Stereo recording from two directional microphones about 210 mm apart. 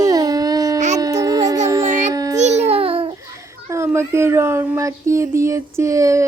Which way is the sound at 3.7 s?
10° right (ahead or behind).